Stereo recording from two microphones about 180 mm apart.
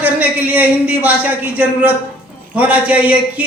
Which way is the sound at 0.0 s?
10° right (ahead or behind).